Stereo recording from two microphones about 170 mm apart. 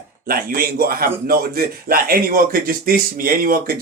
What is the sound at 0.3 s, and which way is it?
A man's voice, 60° right (ahead or behind).